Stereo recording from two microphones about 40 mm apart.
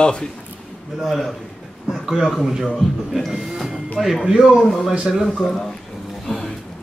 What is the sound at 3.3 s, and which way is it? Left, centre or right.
Speech, centre.